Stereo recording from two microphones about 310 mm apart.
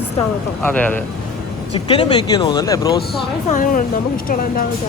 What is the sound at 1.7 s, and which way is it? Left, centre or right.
Speech, centre.